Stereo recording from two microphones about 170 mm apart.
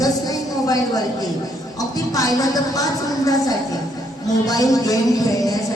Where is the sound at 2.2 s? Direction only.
20° left (ahead or behind).